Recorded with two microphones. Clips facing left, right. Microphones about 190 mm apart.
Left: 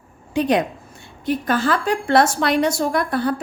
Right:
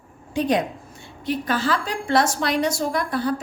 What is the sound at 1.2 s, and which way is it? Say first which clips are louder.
A woman's voice: left 3 dB; 50° left (ahead or behind).